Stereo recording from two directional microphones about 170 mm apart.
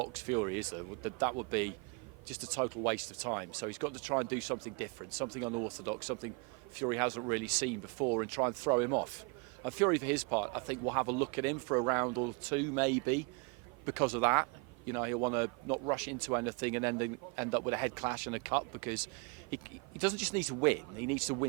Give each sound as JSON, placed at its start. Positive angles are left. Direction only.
{"t": 0.0, "sound": "speech", "side_deg": -20}
{"t": 20.0, "sound": "speech", "side_deg": -15}